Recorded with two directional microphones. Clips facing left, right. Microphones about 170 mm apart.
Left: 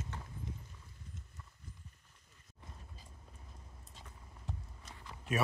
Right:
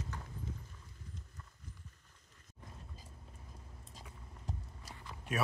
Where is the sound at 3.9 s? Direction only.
40° right (ahead or behind).